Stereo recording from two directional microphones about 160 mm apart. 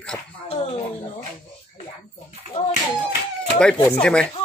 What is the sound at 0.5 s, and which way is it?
Speech, 40° left (ahead or behind).